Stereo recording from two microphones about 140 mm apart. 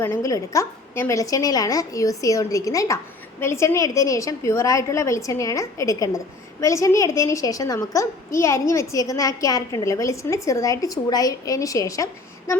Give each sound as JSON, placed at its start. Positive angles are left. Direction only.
{"t": 0.0, "sound": "a woman's voice", "side_deg": 20}